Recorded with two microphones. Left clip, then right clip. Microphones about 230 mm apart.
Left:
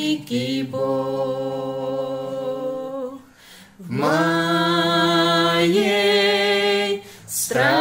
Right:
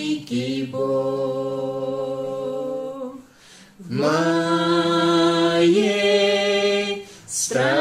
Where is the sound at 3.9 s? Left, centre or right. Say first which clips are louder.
Left 1 dB; left.